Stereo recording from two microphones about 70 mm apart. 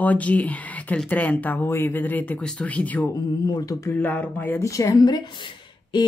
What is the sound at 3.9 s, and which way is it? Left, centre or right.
Speech, left.